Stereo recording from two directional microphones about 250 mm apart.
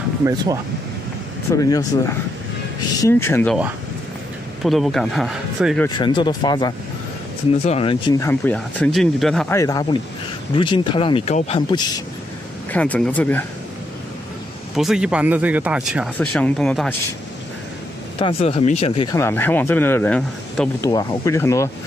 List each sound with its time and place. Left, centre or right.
1.5 s speech: centre
4.6 s speech: centre
5.9 s speech: centre
9.6 s speech: centre
12.7 s speech: centre
14.8 s speech: centre
18.2 s speech: left
19.2 s speech: centre